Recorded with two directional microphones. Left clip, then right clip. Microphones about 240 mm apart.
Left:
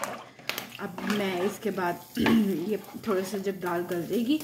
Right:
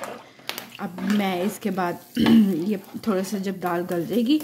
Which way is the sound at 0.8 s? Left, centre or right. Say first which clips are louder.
Right 4 dB; right.